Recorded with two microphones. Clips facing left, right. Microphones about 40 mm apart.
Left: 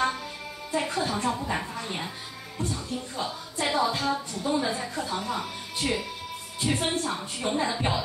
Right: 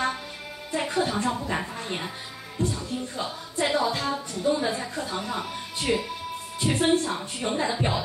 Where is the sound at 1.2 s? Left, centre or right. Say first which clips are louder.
Right 1 dB; centre.